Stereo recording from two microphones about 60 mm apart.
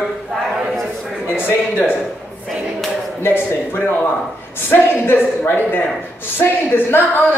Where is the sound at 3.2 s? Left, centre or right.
Left.